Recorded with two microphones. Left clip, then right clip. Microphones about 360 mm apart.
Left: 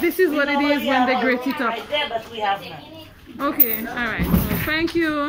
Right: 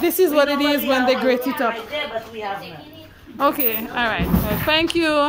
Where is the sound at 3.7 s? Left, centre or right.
Centre.